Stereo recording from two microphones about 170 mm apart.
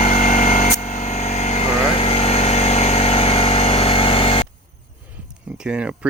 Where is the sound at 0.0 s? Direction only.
50° left (ahead or behind).